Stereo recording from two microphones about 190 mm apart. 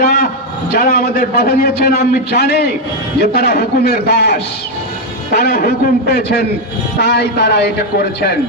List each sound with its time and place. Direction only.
0.7 s a man's voice: 55° left (ahead or behind)